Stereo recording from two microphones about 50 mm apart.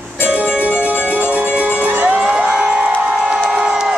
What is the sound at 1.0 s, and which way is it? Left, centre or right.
Music, left.